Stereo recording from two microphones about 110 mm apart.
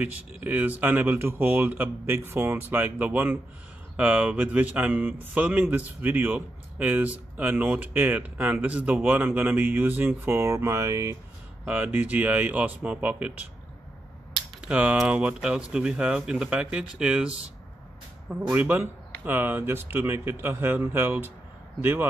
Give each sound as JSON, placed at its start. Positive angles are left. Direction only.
{"t": 0.0, "sound": "speech", "side_deg": -15}
{"t": 11.6, "sound": "speech", "side_deg": -15}
{"t": 14.7, "sound": "a man's voice", "side_deg": -10}